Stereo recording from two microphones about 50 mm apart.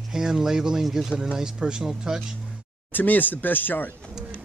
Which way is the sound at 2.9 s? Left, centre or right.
Left.